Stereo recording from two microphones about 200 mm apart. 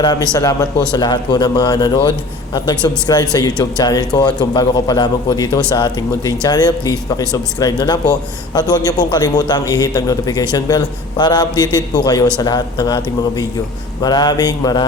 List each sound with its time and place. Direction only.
0.0 s a man's voice: 20° left (ahead or behind)